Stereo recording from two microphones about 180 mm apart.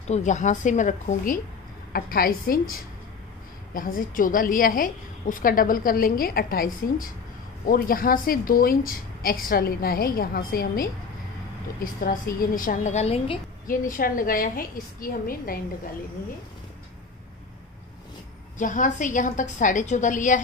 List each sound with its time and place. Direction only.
0.1 s a woman's voice: 40° left (ahead or behind)
13.7 s a woman's voice: 50° left (ahead or behind)
18.6 s a woman's voice: 45° left (ahead or behind)